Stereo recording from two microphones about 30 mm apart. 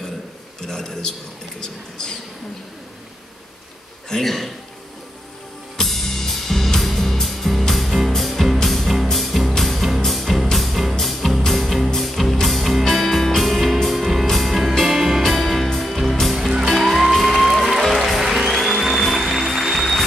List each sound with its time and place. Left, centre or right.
0.7 s a man's voice: left
4.2 s a man's voice: centre
5.9 s music: centre